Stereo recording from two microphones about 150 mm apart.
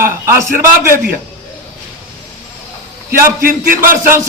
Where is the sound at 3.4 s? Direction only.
70° right (ahead or behind).